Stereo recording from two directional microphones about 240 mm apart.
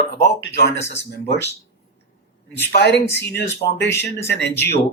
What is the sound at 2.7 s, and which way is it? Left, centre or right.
Speech, left.